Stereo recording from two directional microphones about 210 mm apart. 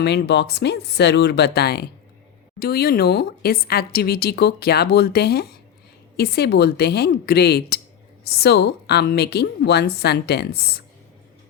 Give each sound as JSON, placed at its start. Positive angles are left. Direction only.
{"t": 0.0, "sound": "a woman's voice", "side_deg": 50}